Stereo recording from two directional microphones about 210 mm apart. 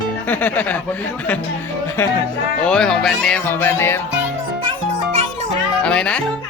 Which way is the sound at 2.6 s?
5° left (ahead or behind).